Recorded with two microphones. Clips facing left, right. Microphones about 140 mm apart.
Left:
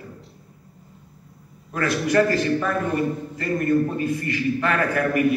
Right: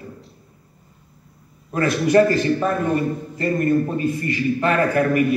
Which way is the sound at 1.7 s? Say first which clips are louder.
Right 4 dB; 25° right (ahead or behind).